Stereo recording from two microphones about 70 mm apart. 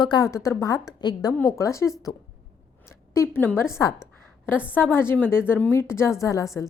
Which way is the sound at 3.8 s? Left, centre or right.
Left.